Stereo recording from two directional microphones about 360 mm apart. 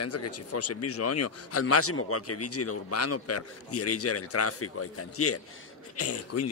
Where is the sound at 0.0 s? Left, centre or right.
Left.